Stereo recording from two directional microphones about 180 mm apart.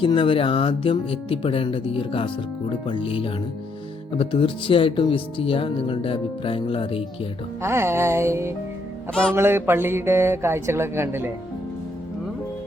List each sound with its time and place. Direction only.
0.0 s speech: 30° left (ahead or behind)
7.6 s speech: 15° right (ahead or behind)